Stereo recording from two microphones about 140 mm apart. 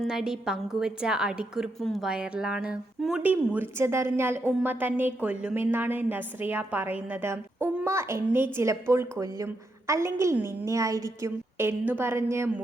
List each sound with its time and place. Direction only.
0.0 s a woman's voice: 5° right (ahead or behind); by 12.5 s 20° right (ahead or behind)